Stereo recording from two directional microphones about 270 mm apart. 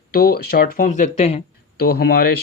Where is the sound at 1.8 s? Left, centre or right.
Left.